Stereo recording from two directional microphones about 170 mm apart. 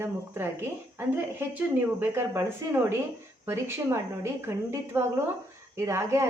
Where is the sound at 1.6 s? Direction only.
10° right (ahead or behind).